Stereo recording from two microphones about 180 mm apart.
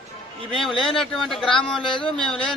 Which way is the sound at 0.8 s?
Centre (ahead or behind).